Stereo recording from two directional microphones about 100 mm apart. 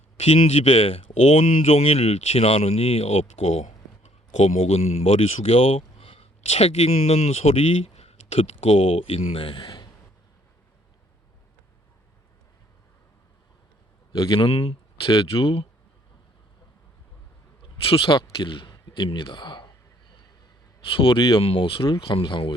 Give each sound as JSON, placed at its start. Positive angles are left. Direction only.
{"t": 0.2, "sound": "speech", "side_deg": 90}
{"t": 9.6, "sound": "a sound", "side_deg": 45}
{"t": 14.1, "sound": "speech", "side_deg": 55}
{"t": 14.5, "sound": "speech", "side_deg": 90}
{"t": 15.1, "sound": "speech", "side_deg": 60}
{"t": 17.6, "sound": "speech", "side_deg": 65}
{"t": 20.8, "sound": "speech", "side_deg": 60}